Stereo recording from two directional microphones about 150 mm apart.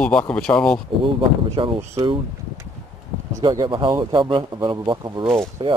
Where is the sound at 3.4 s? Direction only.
30° right (ahead or behind).